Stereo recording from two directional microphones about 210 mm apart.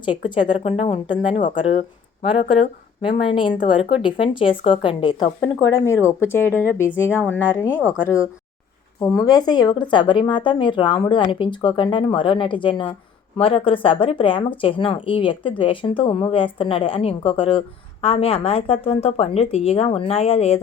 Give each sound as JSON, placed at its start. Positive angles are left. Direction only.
{"t": 0.0, "sound": "speech", "side_deg": 25}
{"t": 3.2, "sound": "speech", "side_deg": 25}
{"t": 7.8, "sound": "speech", "side_deg": -5}
{"t": 9.0, "sound": "speech", "side_deg": 15}